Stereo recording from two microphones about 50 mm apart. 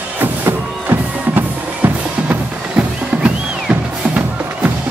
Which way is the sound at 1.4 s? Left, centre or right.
Right.